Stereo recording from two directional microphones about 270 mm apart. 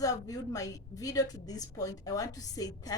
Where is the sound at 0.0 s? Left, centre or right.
Centre.